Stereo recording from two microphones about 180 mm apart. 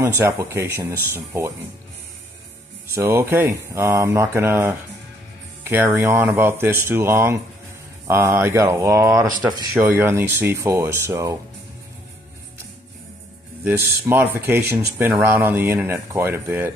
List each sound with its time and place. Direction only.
0.2 s speech: 15° right (ahead or behind)
2.9 s speech: 15° right (ahead or behind)
13.7 s speech: 10° right (ahead or behind)